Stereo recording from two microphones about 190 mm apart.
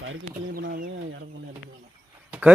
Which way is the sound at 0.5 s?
50° right (ahead or behind).